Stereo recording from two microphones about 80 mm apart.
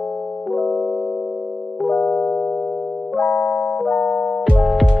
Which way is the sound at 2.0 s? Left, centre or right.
Centre.